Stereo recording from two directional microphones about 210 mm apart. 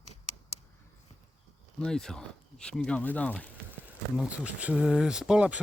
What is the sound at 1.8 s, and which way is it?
Speech, 5° left (ahead or behind).